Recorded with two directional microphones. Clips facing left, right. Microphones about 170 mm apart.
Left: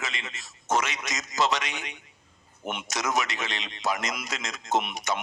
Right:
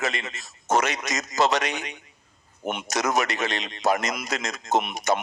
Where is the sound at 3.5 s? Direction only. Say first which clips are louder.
Right 6 dB; 40° right (ahead or behind).